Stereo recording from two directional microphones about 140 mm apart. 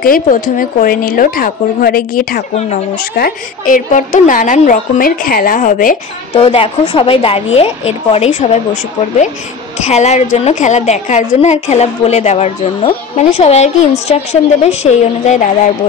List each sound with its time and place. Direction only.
0.0 s a woman's voice: 90° left
6.3 s a woman's voice: 45° left (ahead or behind)
9.8 s a woman's voice: 50° left (ahead or behind)